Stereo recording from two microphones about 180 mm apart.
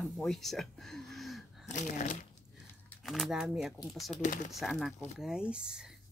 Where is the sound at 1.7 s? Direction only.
45° left (ahead or behind).